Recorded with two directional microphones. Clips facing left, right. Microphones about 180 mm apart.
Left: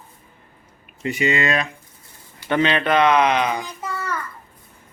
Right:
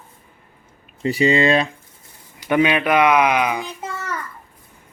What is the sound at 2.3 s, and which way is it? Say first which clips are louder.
Speech: right 2 dB; 15° right (ahead or behind).